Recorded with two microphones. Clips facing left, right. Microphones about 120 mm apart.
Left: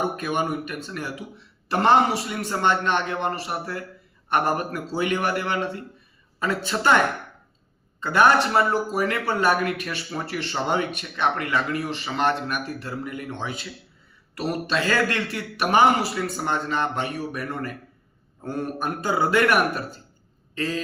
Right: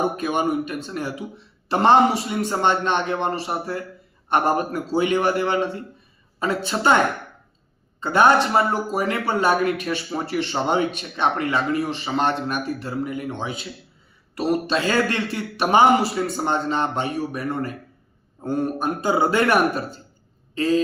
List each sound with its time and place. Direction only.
0.2 s speech: 20° right (ahead or behind)
8.0 s speech: 20° right (ahead or behind)